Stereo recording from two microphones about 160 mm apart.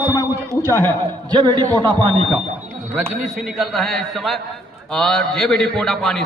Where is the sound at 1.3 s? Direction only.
30° right (ahead or behind).